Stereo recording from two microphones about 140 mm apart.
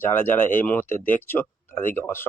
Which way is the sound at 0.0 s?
15° left (ahead or behind).